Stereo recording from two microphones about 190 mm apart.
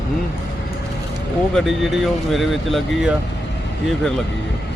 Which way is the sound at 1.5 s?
Centre (ahead or behind).